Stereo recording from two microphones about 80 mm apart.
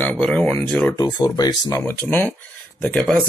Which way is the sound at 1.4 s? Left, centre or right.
Left.